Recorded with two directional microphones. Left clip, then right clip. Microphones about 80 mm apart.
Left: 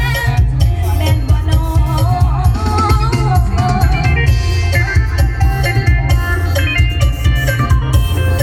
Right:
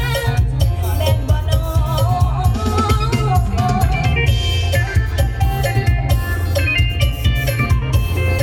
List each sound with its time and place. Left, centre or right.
0.0 s music: right
1.9 s music: right
6.1 s music: right